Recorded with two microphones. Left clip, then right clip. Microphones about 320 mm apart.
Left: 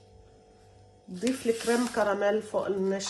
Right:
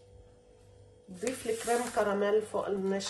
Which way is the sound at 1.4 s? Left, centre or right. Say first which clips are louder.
Left 3 dB; left.